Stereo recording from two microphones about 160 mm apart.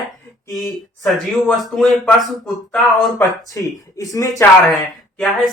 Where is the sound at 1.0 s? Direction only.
Centre (ahead or behind).